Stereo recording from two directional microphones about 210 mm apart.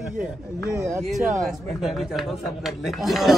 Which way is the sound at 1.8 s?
Centre (ahead or behind).